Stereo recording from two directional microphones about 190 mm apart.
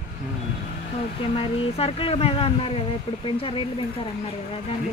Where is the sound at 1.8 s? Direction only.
30° left (ahead or behind).